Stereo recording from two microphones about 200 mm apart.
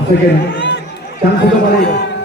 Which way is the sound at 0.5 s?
60° left (ahead or behind).